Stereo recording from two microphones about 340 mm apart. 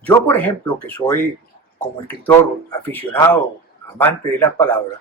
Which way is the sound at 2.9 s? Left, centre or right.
Centre.